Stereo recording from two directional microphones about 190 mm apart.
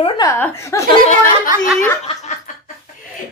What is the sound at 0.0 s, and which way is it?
Speech, 15° left (ahead or behind).